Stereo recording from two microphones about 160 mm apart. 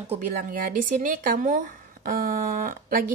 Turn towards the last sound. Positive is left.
turn(degrees=-60)  # may be behind; listen again after turning